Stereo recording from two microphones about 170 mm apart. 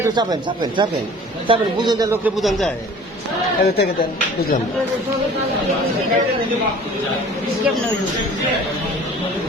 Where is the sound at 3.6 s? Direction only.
70° left (ahead or behind).